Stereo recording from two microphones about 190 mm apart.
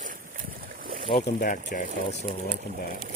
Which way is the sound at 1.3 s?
45° left (ahead or behind).